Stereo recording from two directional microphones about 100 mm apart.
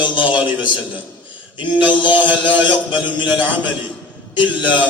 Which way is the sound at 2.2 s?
15° right (ahead or behind).